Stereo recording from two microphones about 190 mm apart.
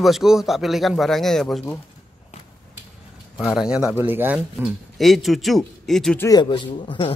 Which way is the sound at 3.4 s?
5° right (ahead or behind).